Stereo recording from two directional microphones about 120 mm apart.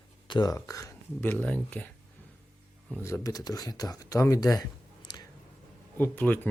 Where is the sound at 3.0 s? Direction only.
25° left (ahead or behind).